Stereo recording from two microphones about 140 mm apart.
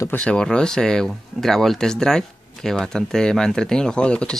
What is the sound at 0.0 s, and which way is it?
Speech, 10° left (ahead or behind).